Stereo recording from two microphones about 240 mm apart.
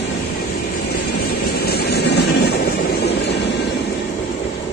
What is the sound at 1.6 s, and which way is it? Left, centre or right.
Vehicle, left.